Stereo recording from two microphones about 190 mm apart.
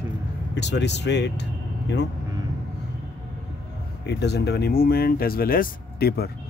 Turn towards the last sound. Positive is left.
turn(degrees=55)  # may be behind; listen again after turning